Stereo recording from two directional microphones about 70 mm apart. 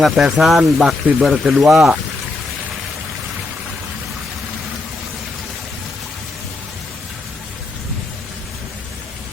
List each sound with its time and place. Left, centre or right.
0.0 s speech: centre